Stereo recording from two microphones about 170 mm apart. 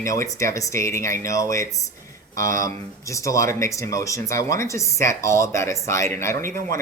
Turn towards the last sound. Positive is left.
turn(degrees=-55)  # may be behind; listen again after turning